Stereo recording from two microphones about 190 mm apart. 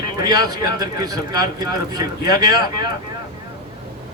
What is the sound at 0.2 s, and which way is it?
A man's voice, 20° right (ahead or behind).